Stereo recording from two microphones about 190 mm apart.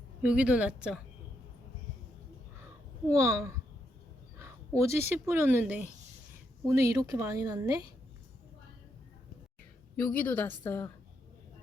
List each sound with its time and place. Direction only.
0.2 s speech: 5° right (ahead or behind)
3.1 s speech: 15° right (ahead or behind)
4.8 s speech: 15° right (ahead or behind)
10.0 s a woman's voice: 10° left (ahead or behind)